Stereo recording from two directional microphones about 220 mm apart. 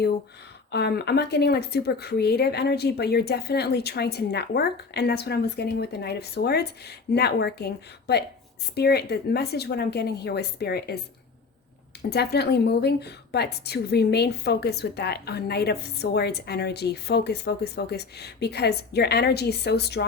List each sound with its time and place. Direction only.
0.7 s a woman's voice: 50° left (ahead or behind)
12.1 s a woman's voice: 50° left (ahead or behind)